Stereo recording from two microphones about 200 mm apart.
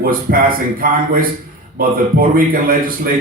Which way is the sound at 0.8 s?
45° right (ahead or behind).